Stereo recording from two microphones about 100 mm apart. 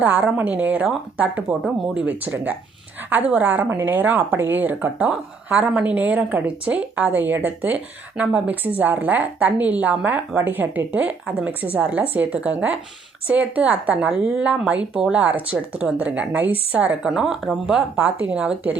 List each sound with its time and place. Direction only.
0.0 s a woman's voice: 20° right (ahead or behind)